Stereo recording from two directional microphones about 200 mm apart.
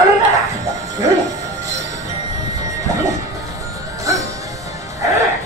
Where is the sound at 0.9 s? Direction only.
15° right (ahead or behind).